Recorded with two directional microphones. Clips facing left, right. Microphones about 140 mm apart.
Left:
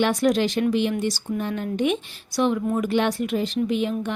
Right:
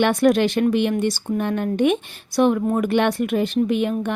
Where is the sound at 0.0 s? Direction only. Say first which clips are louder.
Right 4 dB; 60° right (ahead or behind).